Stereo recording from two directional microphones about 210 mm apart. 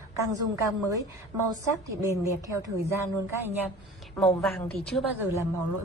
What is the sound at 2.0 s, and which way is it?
A woman's voice, 15° right (ahead or behind).